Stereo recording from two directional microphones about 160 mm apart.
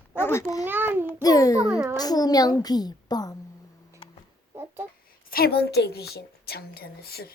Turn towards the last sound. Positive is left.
turn(degrees=75)  # may be behind; listen again after turning